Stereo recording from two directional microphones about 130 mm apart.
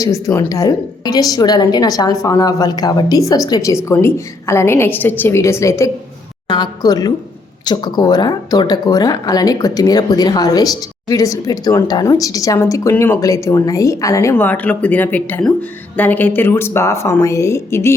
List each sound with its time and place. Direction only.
0.0 s speech: 20° left (ahead or behind)